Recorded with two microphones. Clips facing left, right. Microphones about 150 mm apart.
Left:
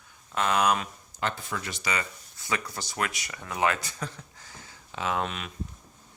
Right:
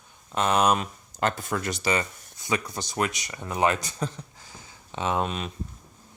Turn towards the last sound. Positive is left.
turn(degrees=-25)  # may be behind; listen again after turning